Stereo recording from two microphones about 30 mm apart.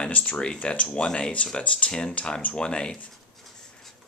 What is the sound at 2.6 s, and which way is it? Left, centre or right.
Speech, left.